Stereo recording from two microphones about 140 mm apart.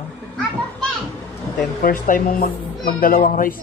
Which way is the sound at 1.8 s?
80° left.